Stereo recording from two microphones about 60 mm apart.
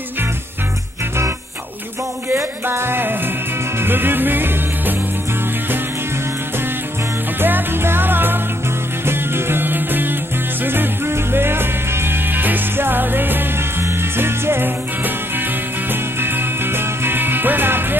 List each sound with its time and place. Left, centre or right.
2.2 s music: right
7.3 s music: right